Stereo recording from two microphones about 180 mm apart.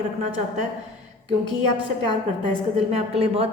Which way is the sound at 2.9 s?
35° right (ahead or behind).